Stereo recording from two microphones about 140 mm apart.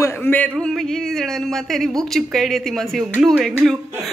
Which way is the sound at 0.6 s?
5° left (ahead or behind).